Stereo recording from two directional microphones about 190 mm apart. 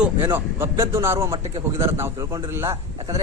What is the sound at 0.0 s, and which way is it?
A man's voice, 10° right (ahead or behind).